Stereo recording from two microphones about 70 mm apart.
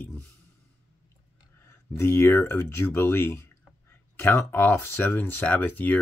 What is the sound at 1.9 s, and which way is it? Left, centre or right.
Speech, left.